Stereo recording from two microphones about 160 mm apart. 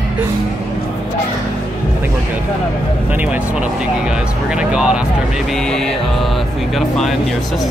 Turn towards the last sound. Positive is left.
turn(degrees=0)  # may be behind; listen again after turning